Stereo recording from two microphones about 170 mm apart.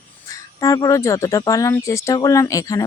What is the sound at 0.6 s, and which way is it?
Speech, 20° left (ahead or behind).